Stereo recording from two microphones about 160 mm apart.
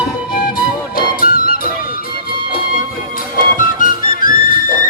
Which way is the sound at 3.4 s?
60° left (ahead or behind).